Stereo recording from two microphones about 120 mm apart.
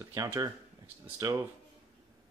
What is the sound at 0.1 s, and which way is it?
Speech, 30° right (ahead or behind).